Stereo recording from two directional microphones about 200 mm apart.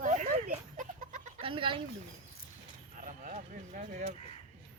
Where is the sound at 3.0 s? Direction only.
40° right (ahead or behind).